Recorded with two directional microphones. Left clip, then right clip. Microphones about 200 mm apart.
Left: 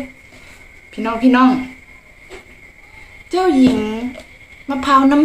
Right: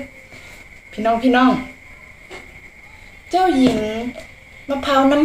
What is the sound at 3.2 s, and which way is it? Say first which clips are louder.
Speech: left 1 dB; 25° left (ahead or behind).